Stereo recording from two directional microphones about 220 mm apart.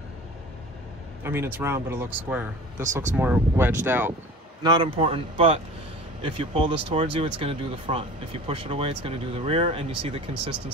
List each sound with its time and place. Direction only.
1.2 s speech: 10° right (ahead or behind)
2.8 s speech: 35° right (ahead or behind)
3.2 s speech: 10° right (ahead or behind)
4.6 s speech: 25° right (ahead or behind)